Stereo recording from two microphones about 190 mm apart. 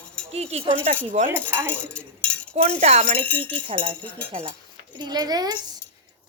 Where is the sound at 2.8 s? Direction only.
35° right (ahead or behind).